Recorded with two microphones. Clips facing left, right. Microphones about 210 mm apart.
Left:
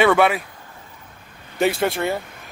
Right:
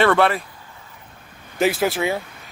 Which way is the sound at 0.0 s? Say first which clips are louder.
Left 1 dB; 5° left (ahead or behind).